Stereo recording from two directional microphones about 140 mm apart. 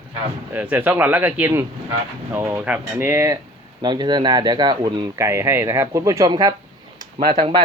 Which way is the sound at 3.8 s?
30° right (ahead or behind).